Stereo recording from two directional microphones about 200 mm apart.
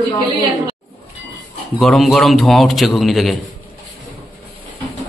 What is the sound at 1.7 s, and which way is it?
A man's voice, centre (ahead or behind).